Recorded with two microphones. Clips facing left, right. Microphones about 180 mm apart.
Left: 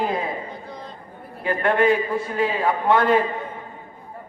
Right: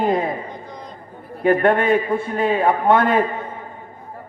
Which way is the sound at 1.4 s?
50° right (ahead or behind).